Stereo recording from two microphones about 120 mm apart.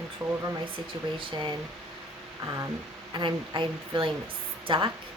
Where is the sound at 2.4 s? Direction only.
30° right (ahead or behind).